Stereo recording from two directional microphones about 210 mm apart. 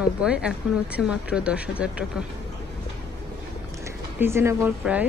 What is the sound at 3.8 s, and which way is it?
Speech, 10° right (ahead or behind).